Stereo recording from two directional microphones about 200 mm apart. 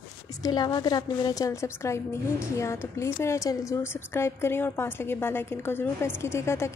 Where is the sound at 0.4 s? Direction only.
20° left (ahead or behind).